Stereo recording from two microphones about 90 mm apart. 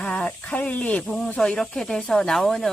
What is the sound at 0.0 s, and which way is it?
Speech, 10° left (ahead or behind).